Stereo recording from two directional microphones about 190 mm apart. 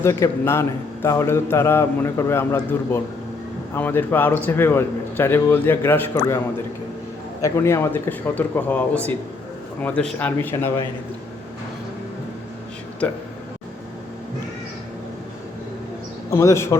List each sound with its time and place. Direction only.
0.0 s a man's voice: 15° left (ahead or behind)
7.4 s a man's voice: 15° left (ahead or behind)
9.8 s a man's voice: 5° left (ahead or behind)
16.3 s a man's voice: 15° left (ahead or behind)